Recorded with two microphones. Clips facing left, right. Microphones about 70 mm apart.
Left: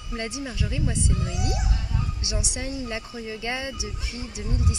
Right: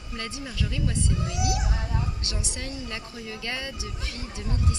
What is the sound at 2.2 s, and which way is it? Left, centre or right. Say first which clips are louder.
Speech: left 3 dB; centre.